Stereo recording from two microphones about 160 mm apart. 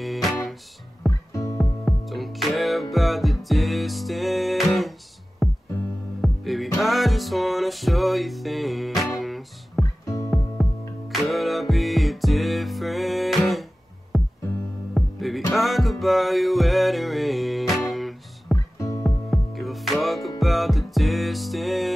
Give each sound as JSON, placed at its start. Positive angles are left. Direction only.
{"t": 0.0, "sound": "music", "side_deg": 0}
{"t": 1.3, "sound": "music", "side_deg": 20}
{"t": 1.6, "sound": "music", "side_deg": 0}
{"t": 10.0, "sound": "music", "side_deg": 20}
{"t": 10.3, "sound": "music", "side_deg": 0}
{"t": 18.8, "sound": "music", "side_deg": 20}
{"t": 19.0, "sound": "music", "side_deg": 0}